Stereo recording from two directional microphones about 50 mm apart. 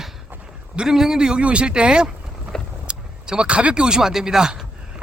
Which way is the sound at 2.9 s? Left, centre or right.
Centre.